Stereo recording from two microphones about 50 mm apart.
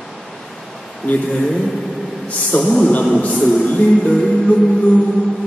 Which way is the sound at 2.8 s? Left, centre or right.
Left.